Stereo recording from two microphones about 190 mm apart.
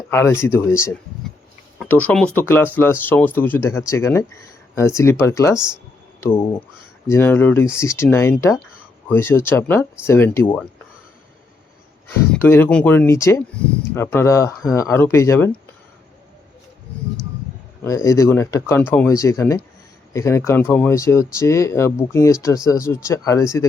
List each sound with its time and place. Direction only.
0.1 s speech: 15° left (ahead or behind)
12.3 s speech: 10° left (ahead or behind)
17.8 s speech: 15° left (ahead or behind)